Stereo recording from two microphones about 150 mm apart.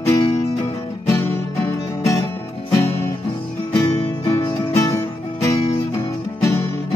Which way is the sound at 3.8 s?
25° left (ahead or behind).